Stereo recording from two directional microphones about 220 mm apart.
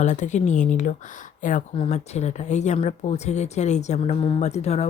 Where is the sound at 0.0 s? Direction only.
35° left (ahead or behind).